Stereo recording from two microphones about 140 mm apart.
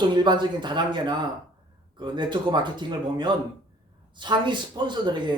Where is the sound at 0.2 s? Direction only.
35° right (ahead or behind).